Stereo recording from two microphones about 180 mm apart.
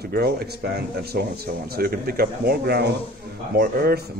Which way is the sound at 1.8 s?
55° right (ahead or behind).